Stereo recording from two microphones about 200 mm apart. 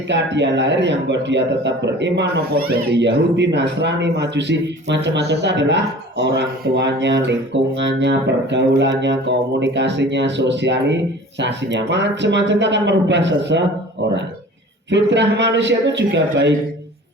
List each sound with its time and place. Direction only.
0.1 s a man's voice: 60° right (ahead or behind)
14.8 s a man's voice: 60° right (ahead or behind)